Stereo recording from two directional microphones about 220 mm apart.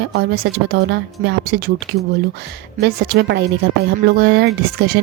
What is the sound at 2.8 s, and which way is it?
A woman's voice, 50° right (ahead or behind).